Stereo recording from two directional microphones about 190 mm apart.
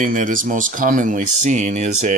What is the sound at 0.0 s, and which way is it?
Speech, 45° right (ahead or behind).